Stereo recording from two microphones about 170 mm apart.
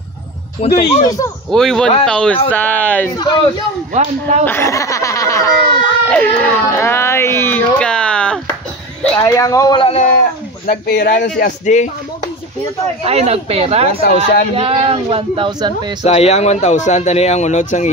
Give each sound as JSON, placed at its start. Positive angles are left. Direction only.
{"t": 0.6, "sound": "speech", "side_deg": 35}
{"t": 1.0, "sound": "speech", "side_deg": 20}
{"t": 1.5, "sound": "speech", "side_deg": 0}
{"t": 3.9, "sound": "speech", "side_deg": -45}
{"t": 4.5, "sound": "snicker", "side_deg": 15}
{"t": 6.0, "sound": "a sound", "side_deg": 10}
{"t": 9.0, "sound": "speech", "side_deg": 15}
{"t": 9.9, "sound": "speech", "side_deg": 50}
{"t": 10.7, "sound": "speech", "side_deg": 65}
{"t": 11.1, "sound": "speech", "side_deg": 50}
{"t": 13.0, "sound": "a man's voice", "side_deg": -35}
{"t": 14.0, "sound": "speech", "side_deg": 55}
{"t": 14.5, "sound": "a man's voice", "side_deg": -35}
{"t": 16.0, "sound": "speech", "side_deg": 35}